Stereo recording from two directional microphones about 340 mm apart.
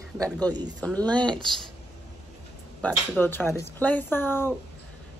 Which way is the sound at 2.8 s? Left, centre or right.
Centre.